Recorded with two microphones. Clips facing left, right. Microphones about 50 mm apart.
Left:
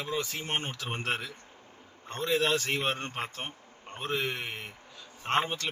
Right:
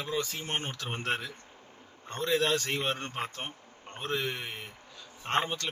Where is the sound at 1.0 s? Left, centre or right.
Centre.